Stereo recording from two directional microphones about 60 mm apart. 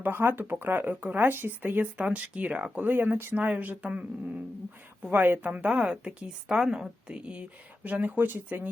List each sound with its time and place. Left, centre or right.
0.0 s speech: right
2.8 s speech: right
5.1 s a woman's voice: right; by 6.9 s centre
7.1 s speech: centre